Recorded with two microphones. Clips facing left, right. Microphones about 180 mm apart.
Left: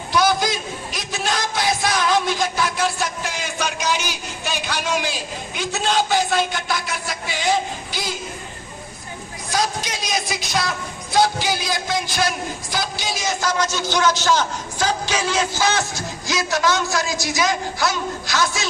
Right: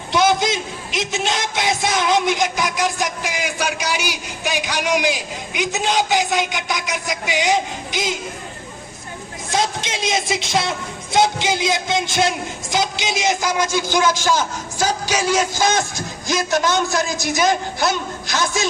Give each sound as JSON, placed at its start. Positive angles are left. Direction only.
{"t": 0.1, "sound": "a man's voice", "side_deg": -20}
{"t": 9.5, "sound": "a woman's voice", "side_deg": -25}
{"t": 17.2, "sound": "a man's voice", "side_deg": -55}
{"t": 17.7, "sound": "a woman's voice", "side_deg": -20}